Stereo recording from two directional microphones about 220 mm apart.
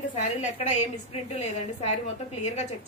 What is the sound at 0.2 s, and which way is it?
A woman's voice, 30° left (ahead or behind).